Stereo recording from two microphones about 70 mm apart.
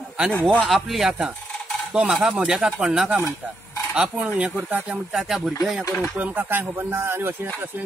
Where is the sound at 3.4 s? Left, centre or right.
Right.